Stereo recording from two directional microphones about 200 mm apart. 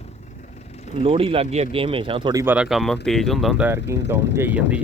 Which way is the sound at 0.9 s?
30° right (ahead or behind).